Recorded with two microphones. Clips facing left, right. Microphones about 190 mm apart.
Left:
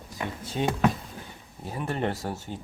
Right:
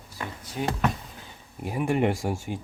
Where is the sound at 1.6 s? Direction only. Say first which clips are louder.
Right 5 dB; 15° right (ahead or behind).